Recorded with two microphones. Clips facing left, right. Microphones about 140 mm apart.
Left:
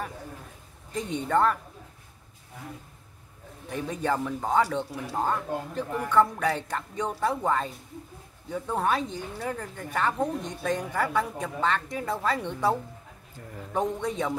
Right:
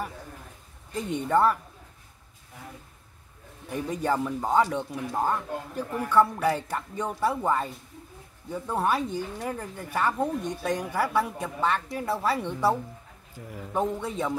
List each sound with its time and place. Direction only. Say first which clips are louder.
0.9 s speech: right 1 dB; 10° right (ahead or behind)
3.6 s a man's voice: right 1 dB; 10° right (ahead or behind)